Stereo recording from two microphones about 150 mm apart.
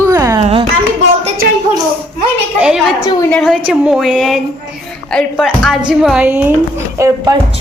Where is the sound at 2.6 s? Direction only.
5° right (ahead or behind).